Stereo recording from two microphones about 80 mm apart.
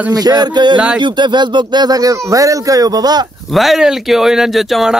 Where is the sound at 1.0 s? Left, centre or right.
Right.